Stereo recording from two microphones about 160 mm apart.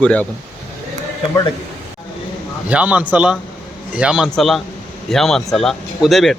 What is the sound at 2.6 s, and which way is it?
A man's voice, 10° right (ahead or behind).